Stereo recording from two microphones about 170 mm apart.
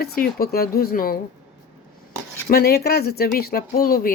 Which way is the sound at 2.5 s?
65° left (ahead or behind).